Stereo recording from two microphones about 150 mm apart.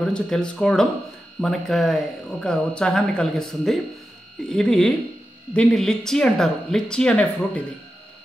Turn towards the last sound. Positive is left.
turn(degrees=5)  # may be behind; listen again after turning